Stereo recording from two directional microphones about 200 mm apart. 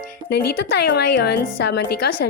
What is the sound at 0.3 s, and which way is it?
A woman's voice, 55° left (ahead or behind).